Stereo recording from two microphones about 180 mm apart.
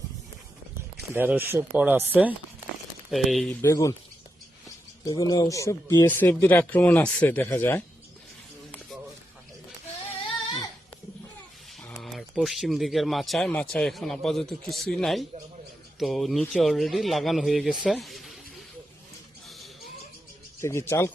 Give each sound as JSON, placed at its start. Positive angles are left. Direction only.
{"t": 1.1, "sound": "speech", "side_deg": -10}
{"t": 3.5, "sound": "speech", "side_deg": 15}
{"t": 5.0, "sound": "speech", "side_deg": 20}
{"t": 11.8, "sound": "speech", "side_deg": 5}
{"t": 19.5, "sound": "rodents", "side_deg": 0}
{"t": 20.6, "sound": "speech", "side_deg": 15}